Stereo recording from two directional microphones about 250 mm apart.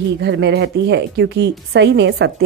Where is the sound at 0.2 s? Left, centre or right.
Right.